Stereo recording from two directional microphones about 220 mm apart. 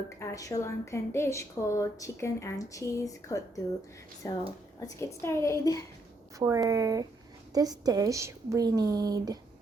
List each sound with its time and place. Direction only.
0.2 s a woman's voice: 15° left (ahead or behind)
6.4 s a woman's voice: 15° right (ahead or behind)